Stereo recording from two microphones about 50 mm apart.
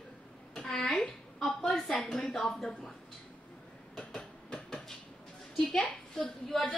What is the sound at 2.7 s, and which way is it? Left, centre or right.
Speech, left.